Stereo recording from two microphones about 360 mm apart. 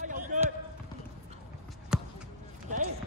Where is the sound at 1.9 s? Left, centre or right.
Centre.